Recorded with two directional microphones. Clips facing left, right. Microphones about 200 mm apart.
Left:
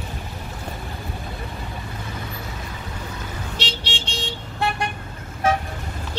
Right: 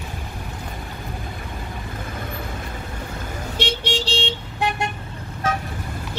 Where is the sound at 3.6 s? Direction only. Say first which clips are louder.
Right 10 dB; 45° right (ahead or behind); by 4.3 s 30° right (ahead or behind).